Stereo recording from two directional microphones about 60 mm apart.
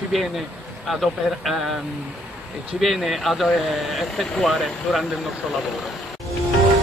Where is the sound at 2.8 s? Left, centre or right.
Centre.